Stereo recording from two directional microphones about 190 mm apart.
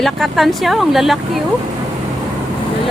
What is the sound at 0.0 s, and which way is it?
Speech, centre (ahead or behind).